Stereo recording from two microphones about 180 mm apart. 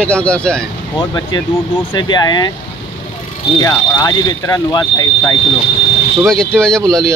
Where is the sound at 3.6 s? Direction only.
20° left (ahead or behind).